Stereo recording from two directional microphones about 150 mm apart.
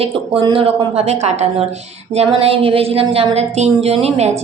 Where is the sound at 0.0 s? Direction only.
35° right (ahead or behind).